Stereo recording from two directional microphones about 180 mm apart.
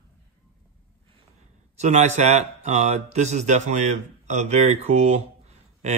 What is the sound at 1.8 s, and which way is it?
Speech, 40° right (ahead or behind).